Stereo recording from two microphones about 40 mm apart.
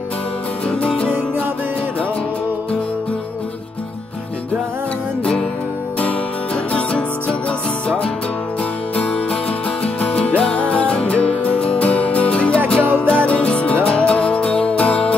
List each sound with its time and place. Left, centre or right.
0.8 s music: left
5.2 s music: centre
6.5 s music: left
12.8 s music: right
13.1 s music: left